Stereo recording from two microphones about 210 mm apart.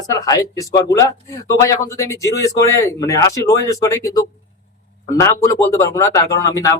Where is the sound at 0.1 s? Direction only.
15° left (ahead or behind).